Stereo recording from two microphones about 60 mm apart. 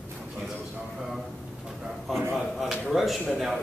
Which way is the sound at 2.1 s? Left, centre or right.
Centre.